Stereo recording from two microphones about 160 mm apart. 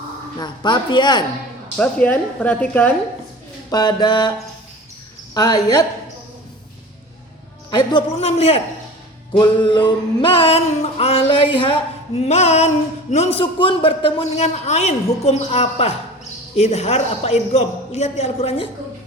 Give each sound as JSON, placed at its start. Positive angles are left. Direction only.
{"t": 0.3, "sound": "speech", "side_deg": 30}
{"t": 1.8, "sound": "speech", "side_deg": 10}
{"t": 3.7, "sound": "speech", "side_deg": 25}
{"t": 5.3, "sound": "speech", "side_deg": 25}
{"t": 7.7, "sound": "speech", "side_deg": 25}
{"t": 8.2, "sound": "a man's voice", "side_deg": 40}